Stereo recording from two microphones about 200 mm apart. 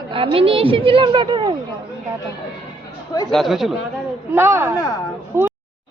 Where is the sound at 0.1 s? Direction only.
25° right (ahead or behind).